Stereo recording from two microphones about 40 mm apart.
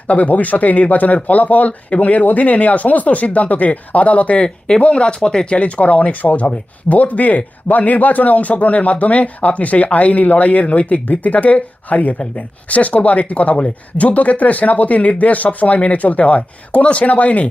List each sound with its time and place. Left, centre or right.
0.1 s speech: left
4.4 s speech: centre
5.5 s speech: left